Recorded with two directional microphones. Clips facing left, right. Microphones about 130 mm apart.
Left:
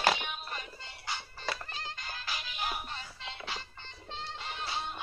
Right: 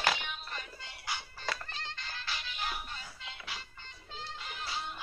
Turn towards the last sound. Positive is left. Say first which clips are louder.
# left 3 dB
turn(degrees=25)  # may be behind; listen again after turning